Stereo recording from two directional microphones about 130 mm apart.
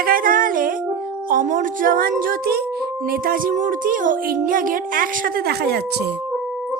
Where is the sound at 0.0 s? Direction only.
90° right.